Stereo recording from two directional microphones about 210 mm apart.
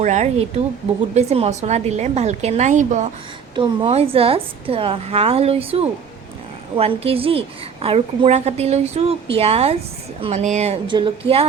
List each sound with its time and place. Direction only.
0.0 s a woman's voice: 35° right (ahead or behind)
3.5 s a woman's voice: 25° right (ahead or behind)